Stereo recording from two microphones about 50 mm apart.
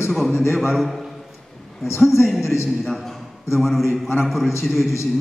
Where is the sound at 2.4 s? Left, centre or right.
Left.